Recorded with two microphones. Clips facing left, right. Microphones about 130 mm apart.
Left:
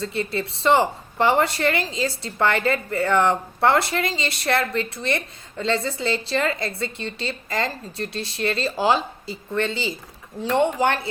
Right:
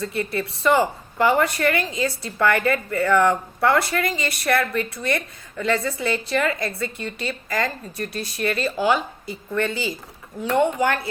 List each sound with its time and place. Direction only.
0.0 s a woman's voice: 25° left (ahead or behind)